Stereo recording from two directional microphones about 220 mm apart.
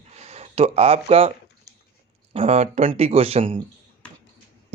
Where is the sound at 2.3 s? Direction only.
25° right (ahead or behind).